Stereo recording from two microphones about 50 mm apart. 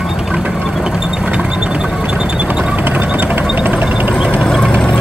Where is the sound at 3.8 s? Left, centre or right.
Right.